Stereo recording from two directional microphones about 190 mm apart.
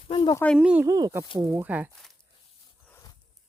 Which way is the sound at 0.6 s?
5° right (ahead or behind).